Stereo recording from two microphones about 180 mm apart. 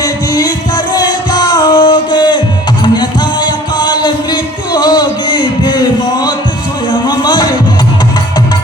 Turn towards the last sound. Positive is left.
turn(degrees=25)  # may be behind; listen again after turning